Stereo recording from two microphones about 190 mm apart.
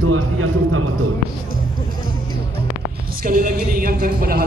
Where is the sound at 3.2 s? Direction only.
45° right (ahead or behind).